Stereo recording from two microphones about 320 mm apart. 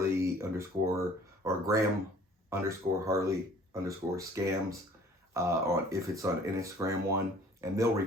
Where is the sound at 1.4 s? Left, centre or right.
Centre.